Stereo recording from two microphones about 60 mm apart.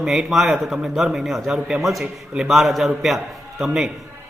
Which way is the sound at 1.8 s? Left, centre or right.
Centre.